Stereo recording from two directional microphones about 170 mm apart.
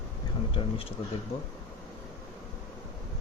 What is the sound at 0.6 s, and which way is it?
Speech, 30° left (ahead or behind).